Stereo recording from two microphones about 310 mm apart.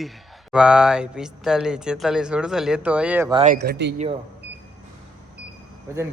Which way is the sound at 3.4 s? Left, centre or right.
Right.